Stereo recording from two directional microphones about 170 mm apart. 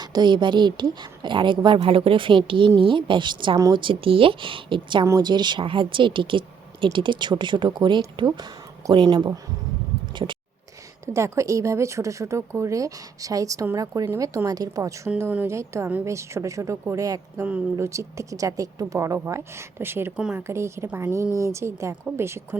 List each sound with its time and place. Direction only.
0.0 s a woman's voice: 25° right (ahead or behind)
11.0 s a woman's voice: 15° right (ahead or behind)
20.5 s a woman's voice: 15° right (ahead or behind)